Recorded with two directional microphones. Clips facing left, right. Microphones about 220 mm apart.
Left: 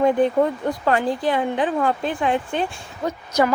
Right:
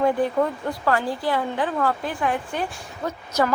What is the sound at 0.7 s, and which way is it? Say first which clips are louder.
A woman's voice: left 3 dB; 20° left (ahead or behind).